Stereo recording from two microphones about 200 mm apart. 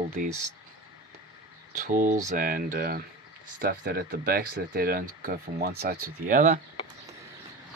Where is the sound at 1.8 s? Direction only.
40° right (ahead or behind).